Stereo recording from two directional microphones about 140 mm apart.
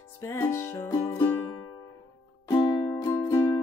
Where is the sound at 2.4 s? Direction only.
30° left (ahead or behind).